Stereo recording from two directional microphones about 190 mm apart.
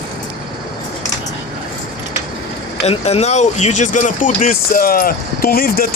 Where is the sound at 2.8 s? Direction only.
35° left (ahead or behind).